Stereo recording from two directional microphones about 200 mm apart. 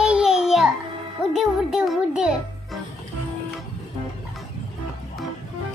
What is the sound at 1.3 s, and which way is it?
A child's voice, centre (ahead or behind).